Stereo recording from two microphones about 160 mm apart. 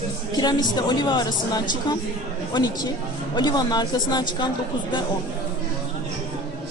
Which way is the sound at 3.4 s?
25° left (ahead or behind).